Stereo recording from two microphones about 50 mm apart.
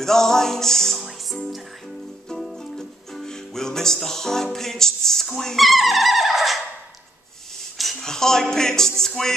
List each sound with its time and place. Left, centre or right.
0.0 s music: centre
7.7 s a sound: centre
8.0 s music: centre